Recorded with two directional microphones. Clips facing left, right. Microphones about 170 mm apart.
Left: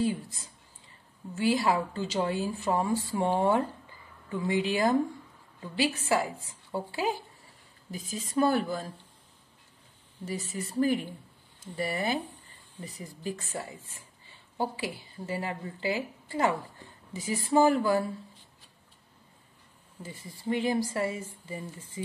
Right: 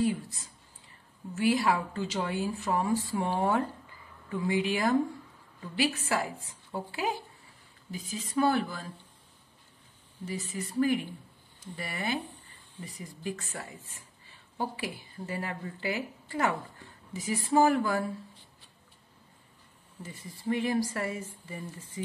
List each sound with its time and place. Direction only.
0.0 s speech: 25° left (ahead or behind)
7.9 s a woman's voice: 40° left (ahead or behind)
10.2 s a woman's voice: 40° left (ahead or behind)
20.0 s speech: 30° left (ahead or behind)